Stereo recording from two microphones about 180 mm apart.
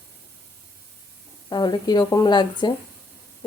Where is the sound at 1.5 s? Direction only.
25° left (ahead or behind).